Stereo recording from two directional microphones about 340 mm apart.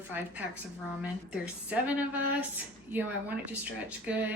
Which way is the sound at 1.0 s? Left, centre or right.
Centre.